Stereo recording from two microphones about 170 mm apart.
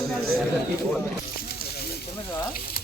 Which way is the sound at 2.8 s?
60° left (ahead or behind).